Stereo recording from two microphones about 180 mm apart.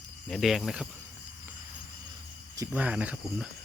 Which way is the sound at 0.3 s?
Centre (ahead or behind).